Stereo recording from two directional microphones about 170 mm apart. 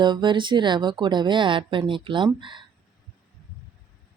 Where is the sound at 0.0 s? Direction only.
25° right (ahead or behind).